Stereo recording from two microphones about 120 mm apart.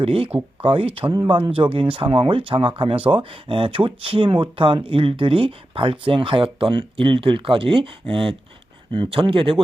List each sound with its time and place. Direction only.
0.0 s speech: 50° right (ahead or behind)